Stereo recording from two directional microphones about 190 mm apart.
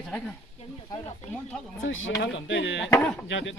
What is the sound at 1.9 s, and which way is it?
Speech, 90° left.